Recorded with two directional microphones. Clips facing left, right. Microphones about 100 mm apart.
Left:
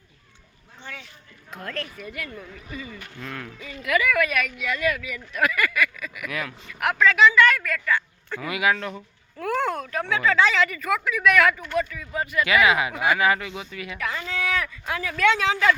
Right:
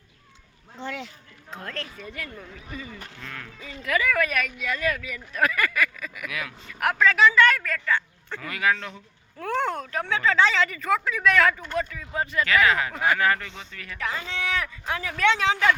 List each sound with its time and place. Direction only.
1.5 s speech: 30° right (ahead or behind)
3.2 s speech: 5° left (ahead or behind)
3.6 s speech: 30° right (ahead or behind)
6.2 s speech: centre (ahead or behind)
6.8 s speech: 35° right (ahead or behind)
8.4 s speech: 10° left (ahead or behind)
9.4 s speech: 25° right (ahead or behind)
12.5 s speech: 15° left (ahead or behind)
14.0 s speech: 25° right (ahead or behind)